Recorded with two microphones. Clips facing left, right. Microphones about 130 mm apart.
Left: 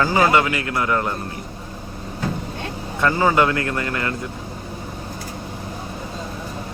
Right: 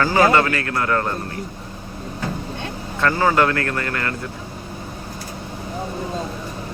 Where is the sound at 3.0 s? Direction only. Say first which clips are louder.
Even; 15° left (ahead or behind).